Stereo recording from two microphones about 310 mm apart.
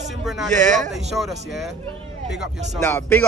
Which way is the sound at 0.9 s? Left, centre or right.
Centre.